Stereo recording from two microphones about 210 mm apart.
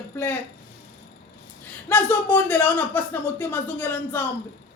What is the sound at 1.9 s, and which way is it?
Speech, 10° left (ahead or behind).